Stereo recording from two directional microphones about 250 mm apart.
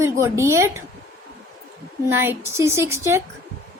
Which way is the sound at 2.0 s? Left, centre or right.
Centre.